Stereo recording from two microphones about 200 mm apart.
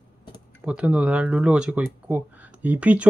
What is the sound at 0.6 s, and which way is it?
Speech, 5° right (ahead or behind).